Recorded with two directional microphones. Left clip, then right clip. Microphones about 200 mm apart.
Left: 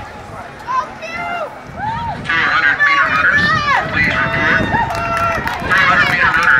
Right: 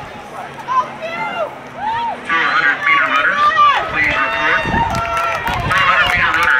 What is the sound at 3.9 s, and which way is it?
Run, 45° left (ahead or behind).